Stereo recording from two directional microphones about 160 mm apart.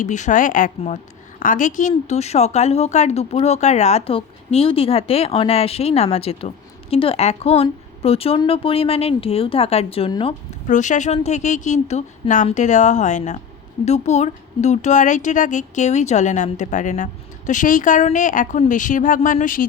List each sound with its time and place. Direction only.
0.0 s a woman's voice: 50° left (ahead or behind); by 10.3 s 35° left (ahead or behind)
10.7 s speech: 50° left (ahead or behind)